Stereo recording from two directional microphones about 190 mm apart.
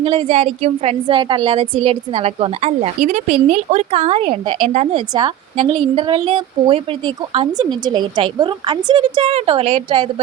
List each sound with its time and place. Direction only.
0.0 s a woman's voice: 30° right (ahead or behind)